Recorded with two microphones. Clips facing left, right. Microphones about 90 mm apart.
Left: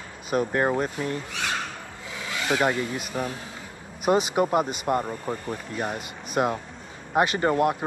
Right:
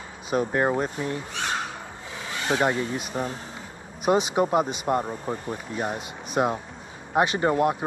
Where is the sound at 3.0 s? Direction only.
Centre (ahead or behind).